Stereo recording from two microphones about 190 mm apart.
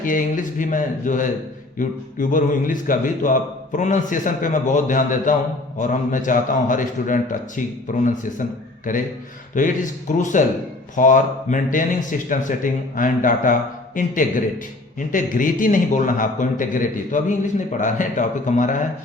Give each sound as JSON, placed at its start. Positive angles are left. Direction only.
{"t": 0.0, "sound": "a man's voice", "side_deg": 45}